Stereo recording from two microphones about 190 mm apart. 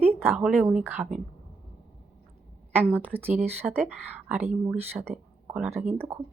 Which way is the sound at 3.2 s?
35° right (ahead or behind).